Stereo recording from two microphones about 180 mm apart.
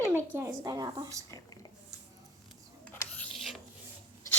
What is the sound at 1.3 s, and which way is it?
Speech, 20° left (ahead or behind).